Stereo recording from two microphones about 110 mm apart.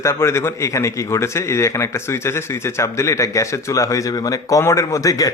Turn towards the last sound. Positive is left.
turn(degrees=30)  # may be behind; listen again after turning